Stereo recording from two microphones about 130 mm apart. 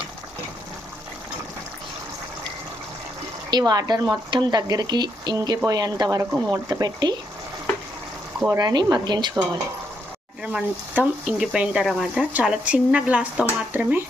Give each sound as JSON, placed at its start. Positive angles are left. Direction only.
{"t": 3.5, "sound": "speech", "side_deg": -30}
{"t": 8.4, "sound": "speech", "side_deg": -30}
{"t": 10.4, "sound": "speech", "side_deg": -10}